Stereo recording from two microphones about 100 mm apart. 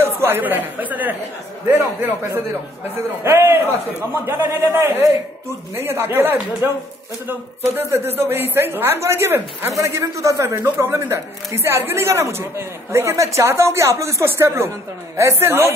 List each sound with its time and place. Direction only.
0.0 s speech: 25° right (ahead or behind)